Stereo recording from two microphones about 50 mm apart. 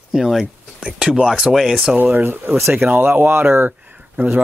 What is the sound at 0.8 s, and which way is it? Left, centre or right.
Speech, centre.